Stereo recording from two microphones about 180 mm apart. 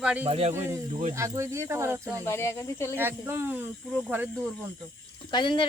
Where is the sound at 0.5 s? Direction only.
15° right (ahead or behind).